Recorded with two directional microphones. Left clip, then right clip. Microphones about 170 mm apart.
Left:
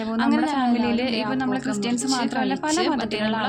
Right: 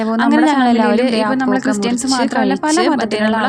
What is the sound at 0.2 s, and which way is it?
Speech, 40° right (ahead or behind).